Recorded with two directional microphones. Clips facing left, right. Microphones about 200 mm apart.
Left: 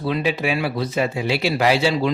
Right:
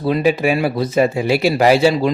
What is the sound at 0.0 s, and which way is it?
Speech, 45° right (ahead or behind).